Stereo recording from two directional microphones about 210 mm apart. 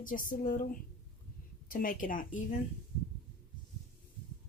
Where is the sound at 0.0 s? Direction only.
40° left (ahead or behind).